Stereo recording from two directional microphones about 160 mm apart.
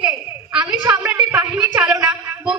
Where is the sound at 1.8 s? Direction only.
5° right (ahead or behind).